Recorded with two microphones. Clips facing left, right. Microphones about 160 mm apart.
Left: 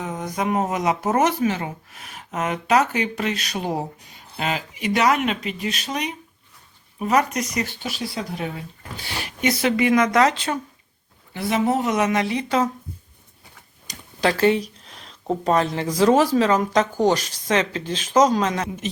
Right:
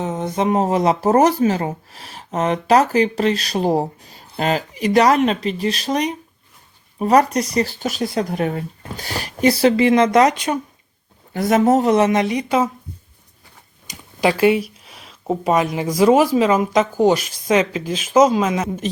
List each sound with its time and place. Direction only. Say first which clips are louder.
0.0 s speech: right 5 dB; 25° right (ahead or behind)
11.3 s speech: right 6 dB; 45° right (ahead or behind); by 12.7 s 10° right (ahead or behind)
13.8 s speech: right 3 dB; 10° right (ahead or behind)